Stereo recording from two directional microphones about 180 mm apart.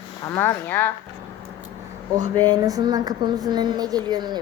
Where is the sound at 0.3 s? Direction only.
15° left (ahead or behind).